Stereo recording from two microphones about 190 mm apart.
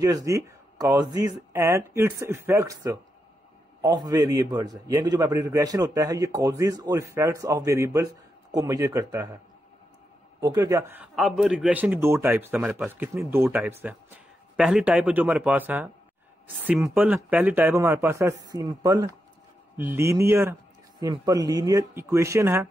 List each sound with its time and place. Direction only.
0.0 s a man's voice: 15° right (ahead or behind)
10.4 s a man's voice: 20° right (ahead or behind)